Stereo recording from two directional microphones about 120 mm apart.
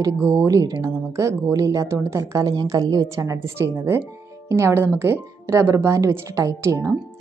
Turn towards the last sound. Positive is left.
turn(degrees=-25)  # may be behind; listen again after turning